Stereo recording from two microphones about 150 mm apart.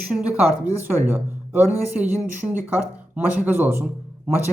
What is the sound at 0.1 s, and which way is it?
Speech, 10° right (ahead or behind).